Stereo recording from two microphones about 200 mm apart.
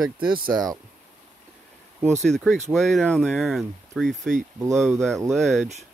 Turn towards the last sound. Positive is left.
turn(degrees=0)  # may be behind; listen again after turning